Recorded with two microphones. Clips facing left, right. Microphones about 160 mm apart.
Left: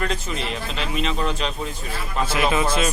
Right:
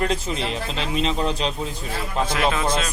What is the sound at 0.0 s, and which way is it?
Speech, 30° right (ahead or behind).